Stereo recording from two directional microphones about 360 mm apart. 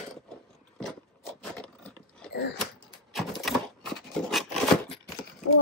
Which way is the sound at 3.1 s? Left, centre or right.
Centre.